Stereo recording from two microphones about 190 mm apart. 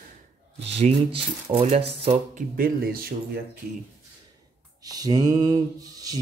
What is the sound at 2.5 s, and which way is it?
Speech, 50° right (ahead or behind).